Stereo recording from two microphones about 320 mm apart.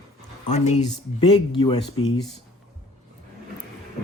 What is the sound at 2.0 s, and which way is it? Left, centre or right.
Speech, left.